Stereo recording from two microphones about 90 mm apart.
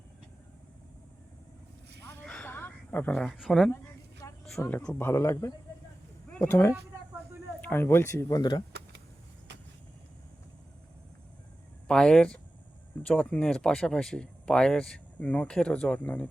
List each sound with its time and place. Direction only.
2.2 s a sound: 15° left (ahead or behind)
4.7 s speech: 15° left (ahead or behind)
4.9 s speech: 30° left (ahead or behind)
8.4 s speech: 55° left (ahead or behind)
11.9 s speech: 5° left (ahead or behind)